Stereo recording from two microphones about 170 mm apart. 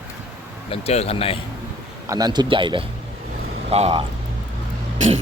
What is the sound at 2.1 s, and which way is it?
A man's voice, 20° right (ahead or behind).